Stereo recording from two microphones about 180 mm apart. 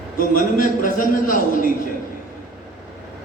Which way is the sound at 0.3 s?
45° left (ahead or behind).